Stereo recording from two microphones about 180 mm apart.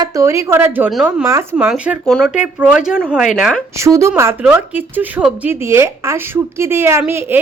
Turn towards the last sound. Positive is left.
turn(degrees=-10)  # may be behind; listen again after turning